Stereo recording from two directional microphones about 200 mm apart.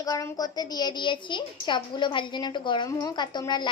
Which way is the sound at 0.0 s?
15° left (ahead or behind).